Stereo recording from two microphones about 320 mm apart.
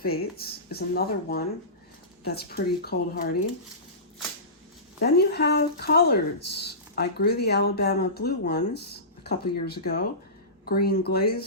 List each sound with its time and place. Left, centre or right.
0.0 s speech: left
4.9 s speech: left